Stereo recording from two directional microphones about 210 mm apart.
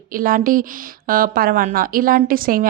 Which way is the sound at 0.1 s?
40° right (ahead or behind).